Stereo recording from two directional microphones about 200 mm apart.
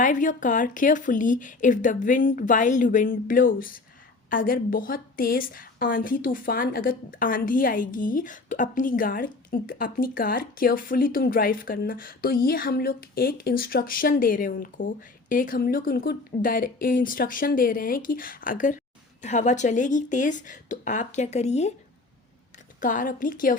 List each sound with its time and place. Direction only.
0.0 s a woman's voice: 40° left (ahead or behind)
22.8 s a woman's voice: 40° left (ahead or behind)